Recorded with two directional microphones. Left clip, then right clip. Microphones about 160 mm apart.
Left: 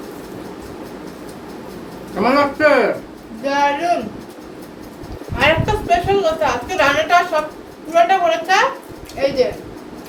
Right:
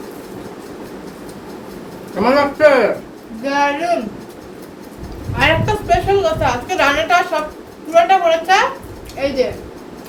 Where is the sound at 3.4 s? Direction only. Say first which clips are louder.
Even; 20° right (ahead or behind).